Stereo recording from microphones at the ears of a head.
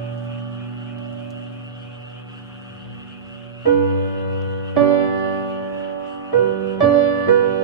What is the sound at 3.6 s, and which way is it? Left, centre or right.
Music, right.